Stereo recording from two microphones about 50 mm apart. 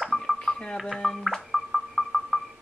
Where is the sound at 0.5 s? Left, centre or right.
Centre.